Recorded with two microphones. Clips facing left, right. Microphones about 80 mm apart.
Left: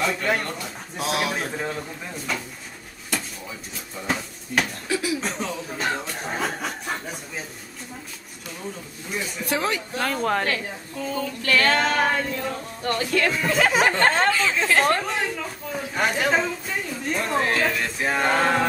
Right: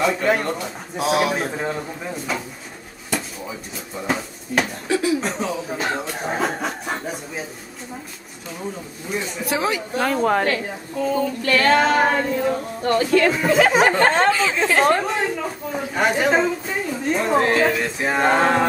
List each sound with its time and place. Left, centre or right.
0.0 s a woman's voice: centre
3.1 s drawer open or close: centre
5.2 s chuckle: centre
9.1 s a woman's voice: centre